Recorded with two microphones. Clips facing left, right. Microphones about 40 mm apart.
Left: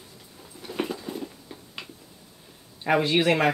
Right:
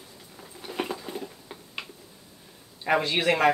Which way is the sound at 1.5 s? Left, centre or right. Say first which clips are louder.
Even; right.